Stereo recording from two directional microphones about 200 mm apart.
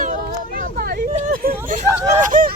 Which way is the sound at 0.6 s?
45° right (ahead or behind).